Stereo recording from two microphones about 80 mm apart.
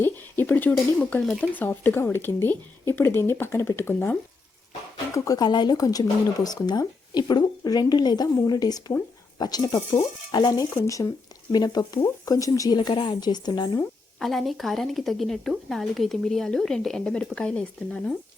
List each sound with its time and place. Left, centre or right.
0.0 s speech: left
5.1 s speech: left
5.4 s speech: left
10.8 s speech: left
11.5 s speech: left
12.2 s speech: left
12.7 s a woman's voice: left
13.1 s speech: left
14.2 s speech: centre